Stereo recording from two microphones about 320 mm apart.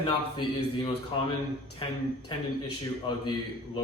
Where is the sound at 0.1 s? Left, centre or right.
Centre.